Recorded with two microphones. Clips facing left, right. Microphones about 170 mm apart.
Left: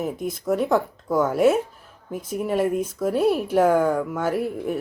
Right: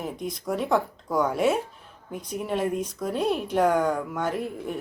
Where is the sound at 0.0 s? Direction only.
5° left (ahead or behind).